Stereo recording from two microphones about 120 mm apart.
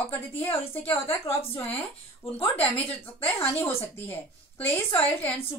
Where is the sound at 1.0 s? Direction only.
20° left (ahead or behind).